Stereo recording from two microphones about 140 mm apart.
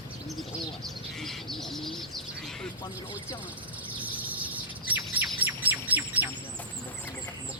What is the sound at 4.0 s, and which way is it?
Bird, 10° right (ahead or behind).